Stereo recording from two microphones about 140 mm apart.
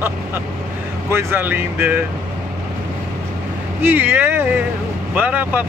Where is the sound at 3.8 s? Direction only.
15° right (ahead or behind).